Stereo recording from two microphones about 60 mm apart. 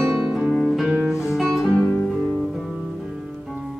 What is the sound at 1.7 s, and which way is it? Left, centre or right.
Music, centre.